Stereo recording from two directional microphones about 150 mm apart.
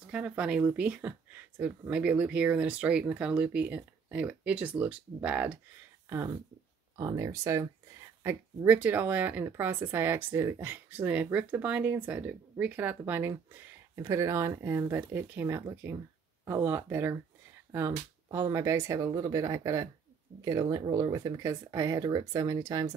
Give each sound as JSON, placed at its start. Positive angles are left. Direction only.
{"t": 0.0, "sound": "speech", "side_deg": -5}
{"t": 20.6, "sound": "speech", "side_deg": -30}
{"t": 20.9, "sound": "speech", "side_deg": -20}